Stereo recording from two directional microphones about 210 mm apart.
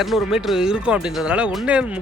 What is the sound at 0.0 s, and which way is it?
Speech, centre (ahead or behind).